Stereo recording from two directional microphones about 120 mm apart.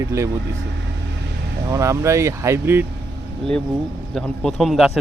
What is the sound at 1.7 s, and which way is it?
Speech, 25° right (ahead or behind).